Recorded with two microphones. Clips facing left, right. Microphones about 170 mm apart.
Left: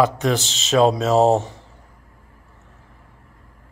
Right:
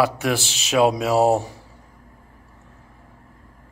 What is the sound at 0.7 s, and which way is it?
Speech, 10° right (ahead or behind).